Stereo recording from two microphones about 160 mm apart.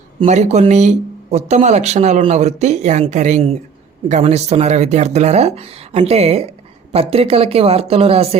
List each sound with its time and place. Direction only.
0.2 s speech: 45° right (ahead or behind)